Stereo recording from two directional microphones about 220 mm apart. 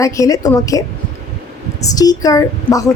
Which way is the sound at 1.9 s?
15° left (ahead or behind).